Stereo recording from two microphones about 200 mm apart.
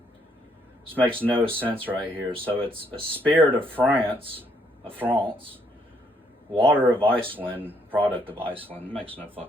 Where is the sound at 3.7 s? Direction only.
10° right (ahead or behind).